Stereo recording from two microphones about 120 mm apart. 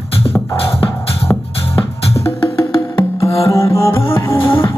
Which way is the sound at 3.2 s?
25° left (ahead or behind).